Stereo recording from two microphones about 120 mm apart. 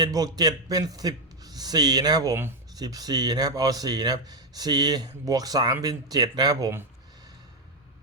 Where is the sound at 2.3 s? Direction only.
20° right (ahead or behind).